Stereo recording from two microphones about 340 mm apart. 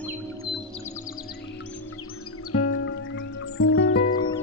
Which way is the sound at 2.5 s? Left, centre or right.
Left.